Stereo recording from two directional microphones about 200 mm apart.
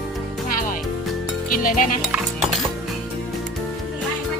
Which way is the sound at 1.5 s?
45° left (ahead or behind).